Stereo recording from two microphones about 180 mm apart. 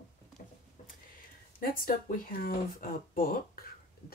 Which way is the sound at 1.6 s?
50° left (ahead or behind).